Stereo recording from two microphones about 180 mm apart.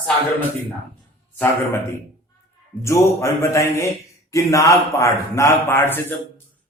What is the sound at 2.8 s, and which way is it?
A man's voice, 15° left (ahead or behind).